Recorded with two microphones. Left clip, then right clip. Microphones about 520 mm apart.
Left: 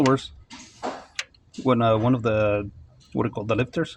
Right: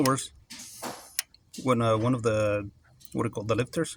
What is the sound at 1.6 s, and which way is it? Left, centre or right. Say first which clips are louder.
Speech: left 5 dB; right.